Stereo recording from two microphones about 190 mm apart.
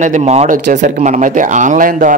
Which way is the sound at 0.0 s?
35° right (ahead or behind).